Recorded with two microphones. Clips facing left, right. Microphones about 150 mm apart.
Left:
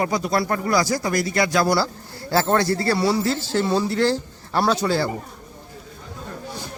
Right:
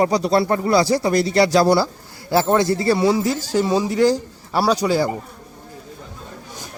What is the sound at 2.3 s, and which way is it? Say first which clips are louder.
Speech: right 3 dB; 15° right (ahead or behind).